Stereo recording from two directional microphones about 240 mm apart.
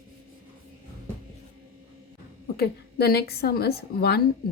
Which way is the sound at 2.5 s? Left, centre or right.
Left.